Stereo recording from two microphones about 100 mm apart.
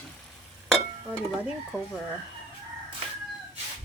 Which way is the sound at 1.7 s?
5° right (ahead or behind).